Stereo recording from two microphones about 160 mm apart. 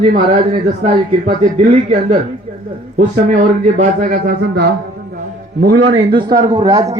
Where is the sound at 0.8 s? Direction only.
45° right (ahead or behind).